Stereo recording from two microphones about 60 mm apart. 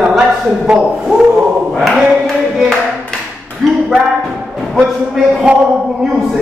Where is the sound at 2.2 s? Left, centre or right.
Centre.